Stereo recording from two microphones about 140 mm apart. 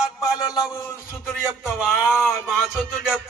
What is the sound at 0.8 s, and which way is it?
Speech, 20° left (ahead or behind).